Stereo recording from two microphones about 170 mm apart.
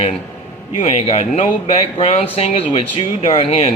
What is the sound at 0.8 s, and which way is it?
Speech, 40° left (ahead or behind).